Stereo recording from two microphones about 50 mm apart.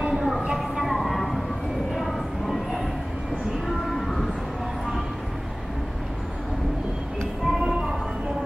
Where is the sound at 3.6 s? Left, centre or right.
Centre.